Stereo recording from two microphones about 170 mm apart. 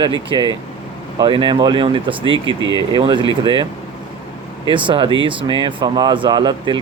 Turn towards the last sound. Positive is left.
turn(degrees=-25)  # may be behind; listen again after turning